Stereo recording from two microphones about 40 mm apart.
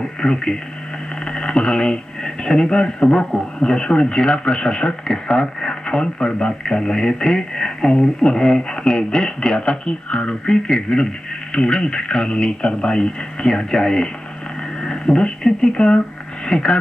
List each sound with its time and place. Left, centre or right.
0.2 s speech: centre